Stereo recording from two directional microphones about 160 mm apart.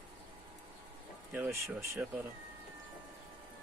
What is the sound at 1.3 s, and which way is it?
Speech, 15° right (ahead or behind).